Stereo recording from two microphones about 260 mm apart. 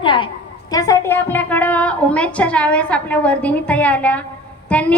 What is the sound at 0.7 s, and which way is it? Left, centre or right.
A woman's voice, centre.